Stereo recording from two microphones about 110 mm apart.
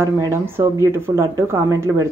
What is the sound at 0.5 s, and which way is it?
Speech, 25° right (ahead or behind).